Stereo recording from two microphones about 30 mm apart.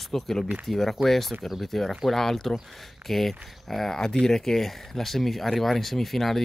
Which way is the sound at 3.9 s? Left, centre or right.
Centre.